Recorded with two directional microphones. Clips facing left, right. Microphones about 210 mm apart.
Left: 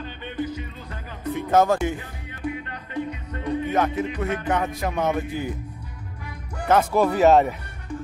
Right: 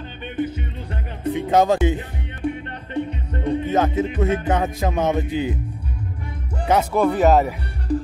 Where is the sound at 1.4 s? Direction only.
15° right (ahead or behind).